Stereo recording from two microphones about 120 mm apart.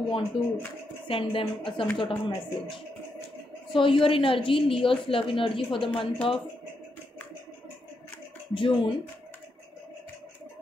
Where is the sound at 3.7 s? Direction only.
45° left (ahead or behind).